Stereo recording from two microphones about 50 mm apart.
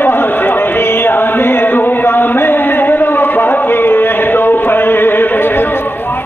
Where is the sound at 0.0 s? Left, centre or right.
Left.